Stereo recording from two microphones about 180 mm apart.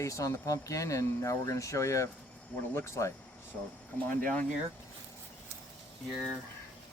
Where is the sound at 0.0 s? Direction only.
15° left (ahead or behind).